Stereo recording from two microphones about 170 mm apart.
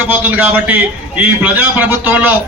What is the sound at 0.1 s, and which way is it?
A man's voice, 10° right (ahead or behind).